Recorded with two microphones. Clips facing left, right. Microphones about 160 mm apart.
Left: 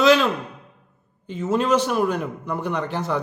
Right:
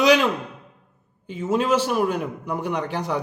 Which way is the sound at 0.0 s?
15° right (ahead or behind).